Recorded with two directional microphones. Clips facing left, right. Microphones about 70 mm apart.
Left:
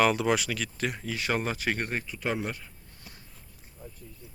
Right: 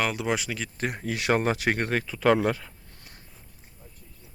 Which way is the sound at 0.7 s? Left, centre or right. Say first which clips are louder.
Right 2 dB; right.